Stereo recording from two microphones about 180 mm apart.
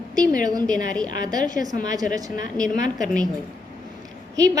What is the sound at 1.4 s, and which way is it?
Speech, 45° left (ahead or behind).